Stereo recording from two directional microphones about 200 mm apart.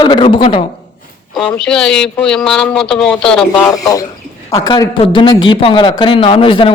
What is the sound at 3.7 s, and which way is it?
A man's voice, 15° left (ahead or behind).